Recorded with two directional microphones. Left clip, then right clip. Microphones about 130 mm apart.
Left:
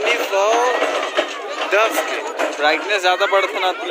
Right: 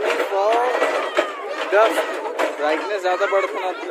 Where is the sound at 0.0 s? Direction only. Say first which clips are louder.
Left 2 dB; 35° right (ahead or behind).